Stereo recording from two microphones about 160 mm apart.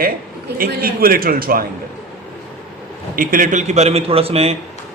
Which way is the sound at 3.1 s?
60° right (ahead or behind).